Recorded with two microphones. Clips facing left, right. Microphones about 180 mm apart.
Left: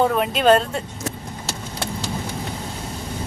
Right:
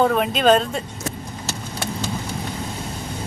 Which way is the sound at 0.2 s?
5° left (ahead or behind).